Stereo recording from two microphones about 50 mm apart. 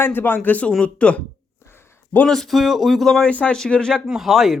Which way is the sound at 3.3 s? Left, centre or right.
Left.